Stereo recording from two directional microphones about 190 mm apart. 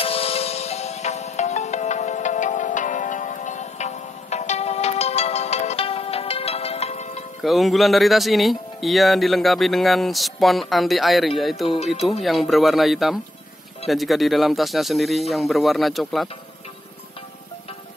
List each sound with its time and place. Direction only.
0.0 s music: 30° left (ahead or behind)
7.4 s speech: centre (ahead or behind)